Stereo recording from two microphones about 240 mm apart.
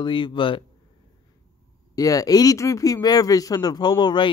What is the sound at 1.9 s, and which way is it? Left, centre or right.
Speech, centre.